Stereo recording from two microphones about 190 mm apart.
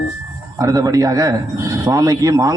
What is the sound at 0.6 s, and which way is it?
A man's voice, 20° right (ahead or behind).